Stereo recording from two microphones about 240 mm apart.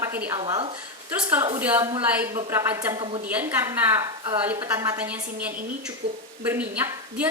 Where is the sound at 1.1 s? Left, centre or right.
Centre.